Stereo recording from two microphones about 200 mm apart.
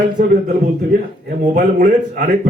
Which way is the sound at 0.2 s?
50° right (ahead or behind).